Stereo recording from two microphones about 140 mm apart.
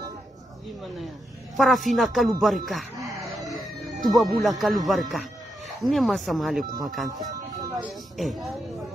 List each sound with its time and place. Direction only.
1.6 s speech: centre (ahead or behind)
3.0 s chicken: 25° right (ahead or behind)
4.0 s speech: centre (ahead or behind)
8.2 s speech: centre (ahead or behind)